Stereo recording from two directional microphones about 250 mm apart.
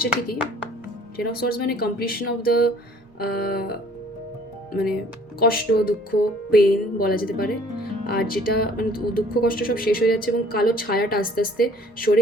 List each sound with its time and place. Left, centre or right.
1.1 s speech: left